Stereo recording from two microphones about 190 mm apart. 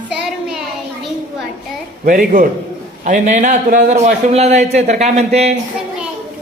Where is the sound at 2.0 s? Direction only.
45° right (ahead or behind).